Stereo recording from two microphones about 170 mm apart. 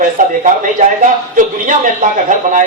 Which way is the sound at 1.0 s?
50° right (ahead or behind).